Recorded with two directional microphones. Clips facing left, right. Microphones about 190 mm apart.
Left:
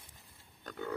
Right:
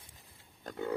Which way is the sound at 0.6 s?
25° right (ahead or behind).